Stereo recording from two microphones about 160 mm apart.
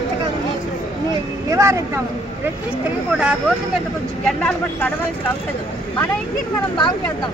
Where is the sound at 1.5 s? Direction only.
20° right (ahead or behind).